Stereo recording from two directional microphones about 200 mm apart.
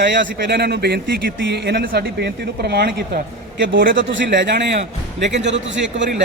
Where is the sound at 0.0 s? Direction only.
55° right (ahead or behind).